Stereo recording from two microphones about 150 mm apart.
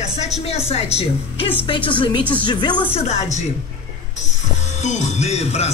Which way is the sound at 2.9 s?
50° left (ahead or behind).